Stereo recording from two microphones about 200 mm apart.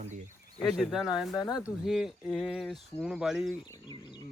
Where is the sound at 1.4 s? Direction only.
20° left (ahead or behind).